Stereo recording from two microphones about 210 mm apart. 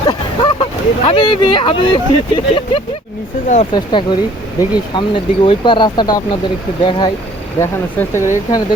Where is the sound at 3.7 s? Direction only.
20° left (ahead or behind).